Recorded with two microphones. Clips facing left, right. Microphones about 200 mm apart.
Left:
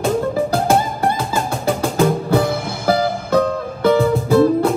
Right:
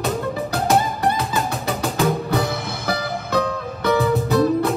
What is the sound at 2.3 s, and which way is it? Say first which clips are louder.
Music: left 5 dB; 30° left (ahead or behind).